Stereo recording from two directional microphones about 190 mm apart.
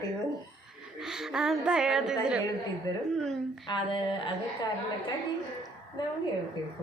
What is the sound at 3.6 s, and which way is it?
Speech, 25° left (ahead or behind).